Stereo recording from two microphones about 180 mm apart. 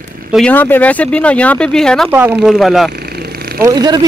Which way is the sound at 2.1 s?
10° right (ahead or behind).